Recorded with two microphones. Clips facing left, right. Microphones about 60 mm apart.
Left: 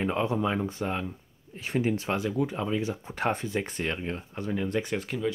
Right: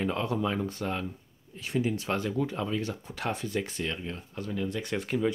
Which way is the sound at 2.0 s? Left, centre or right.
Centre.